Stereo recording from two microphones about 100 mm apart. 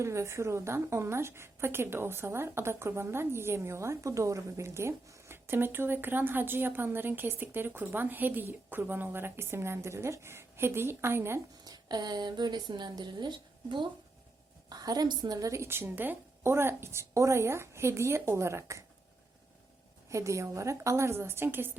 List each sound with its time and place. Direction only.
0.0 s a woman's voice: 30° right (ahead or behind)
11.6 s speech: 40° right (ahead or behind)
14.7 s a woman's voice: 40° right (ahead or behind)
20.1 s a woman's voice: 30° right (ahead or behind)